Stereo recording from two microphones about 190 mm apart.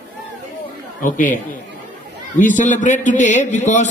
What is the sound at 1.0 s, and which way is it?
A man's voice, 45° left (ahead or behind).